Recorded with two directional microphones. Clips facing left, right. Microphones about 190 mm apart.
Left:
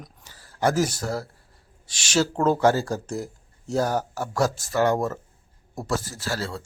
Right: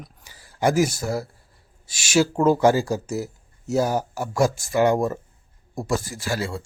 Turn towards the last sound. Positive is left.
turn(degrees=-10)  # may be behind; listen again after turning